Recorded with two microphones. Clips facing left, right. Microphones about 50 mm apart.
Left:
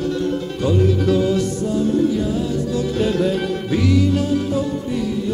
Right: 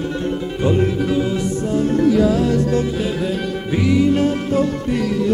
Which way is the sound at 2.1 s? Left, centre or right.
Right.